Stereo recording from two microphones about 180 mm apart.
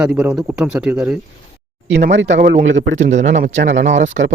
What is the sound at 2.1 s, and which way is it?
Speech, 85° right.